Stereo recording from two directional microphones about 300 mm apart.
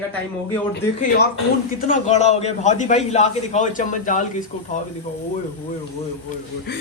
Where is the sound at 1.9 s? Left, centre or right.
Left.